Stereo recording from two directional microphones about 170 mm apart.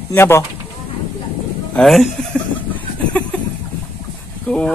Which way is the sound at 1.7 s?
Centre (ahead or behind).